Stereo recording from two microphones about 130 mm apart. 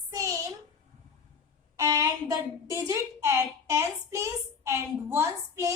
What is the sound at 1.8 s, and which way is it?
A woman's voice, 25° right (ahead or behind).